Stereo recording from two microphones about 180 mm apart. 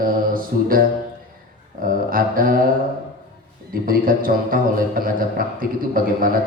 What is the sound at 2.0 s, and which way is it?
Speech, 50° right (ahead or behind).